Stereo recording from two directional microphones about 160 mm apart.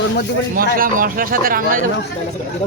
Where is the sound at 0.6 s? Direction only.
60° right (ahead or behind).